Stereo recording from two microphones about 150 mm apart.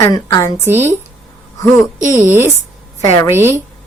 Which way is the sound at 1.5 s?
20° left (ahead or behind).